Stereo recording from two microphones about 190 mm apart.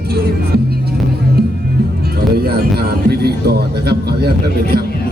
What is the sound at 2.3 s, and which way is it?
A man's voice, 55° right (ahead or behind).